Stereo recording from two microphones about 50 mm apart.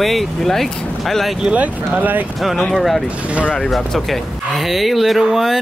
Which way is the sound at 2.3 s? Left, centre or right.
Centre.